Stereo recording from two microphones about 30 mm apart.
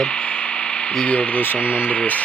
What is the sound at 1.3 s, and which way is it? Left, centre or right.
Speech, left.